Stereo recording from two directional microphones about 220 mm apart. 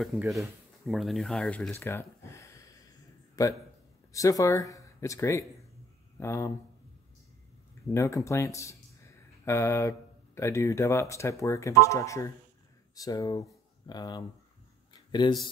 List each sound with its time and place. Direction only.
0.0 s a man's voice: centre (ahead or behind)
7.9 s speech: 15° left (ahead or behind)
14.9 s a sound: 20° left (ahead or behind)